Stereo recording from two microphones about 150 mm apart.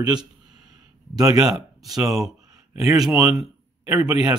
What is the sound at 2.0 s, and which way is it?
Speech, 20° right (ahead or behind).